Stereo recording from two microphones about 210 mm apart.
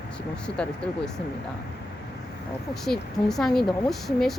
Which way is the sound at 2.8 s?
Centre (ahead or behind).